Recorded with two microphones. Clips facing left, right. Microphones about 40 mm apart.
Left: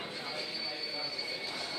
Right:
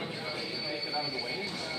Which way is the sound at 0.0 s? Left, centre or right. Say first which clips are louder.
Right 3 dB; centre.